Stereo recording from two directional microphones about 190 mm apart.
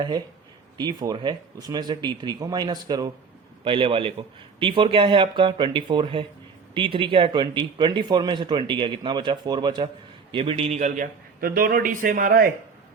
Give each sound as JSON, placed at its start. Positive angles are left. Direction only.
{"t": 0.8, "sound": "a man's voice", "side_deg": -20}